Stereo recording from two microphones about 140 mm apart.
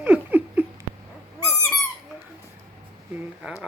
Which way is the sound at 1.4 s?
20° left (ahead or behind).